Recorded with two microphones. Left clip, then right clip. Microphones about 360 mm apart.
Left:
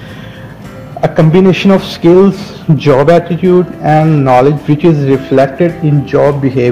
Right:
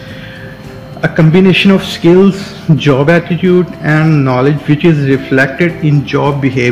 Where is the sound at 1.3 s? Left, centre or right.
Centre.